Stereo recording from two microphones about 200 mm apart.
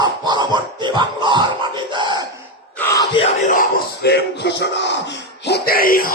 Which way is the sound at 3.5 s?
55° left (ahead or behind).